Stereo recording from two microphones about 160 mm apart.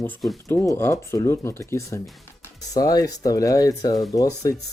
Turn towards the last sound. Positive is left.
turn(degrees=20)  # may be behind; listen again after turning